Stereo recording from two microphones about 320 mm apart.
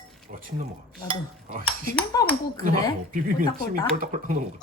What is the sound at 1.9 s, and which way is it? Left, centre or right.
Speech, centre.